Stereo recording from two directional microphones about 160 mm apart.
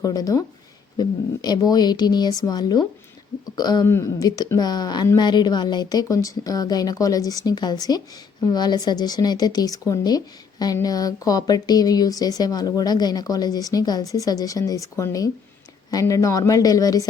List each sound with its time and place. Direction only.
0.0 s a woman's voice: 25° left (ahead or behind)